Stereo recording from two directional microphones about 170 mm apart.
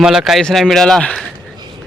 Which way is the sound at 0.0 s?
5° right (ahead or behind).